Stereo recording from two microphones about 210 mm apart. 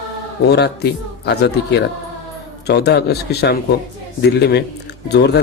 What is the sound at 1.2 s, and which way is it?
Speech, 55° left (ahead or behind).